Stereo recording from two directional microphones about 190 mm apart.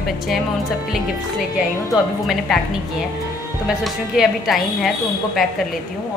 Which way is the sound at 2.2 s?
Centre (ahead or behind).